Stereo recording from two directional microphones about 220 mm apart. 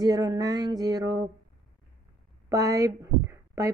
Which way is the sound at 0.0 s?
15° right (ahead or behind).